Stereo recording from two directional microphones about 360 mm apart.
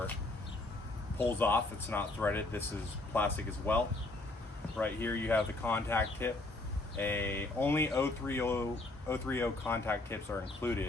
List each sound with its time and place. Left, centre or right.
1.2 s speech: centre
4.8 s speech: centre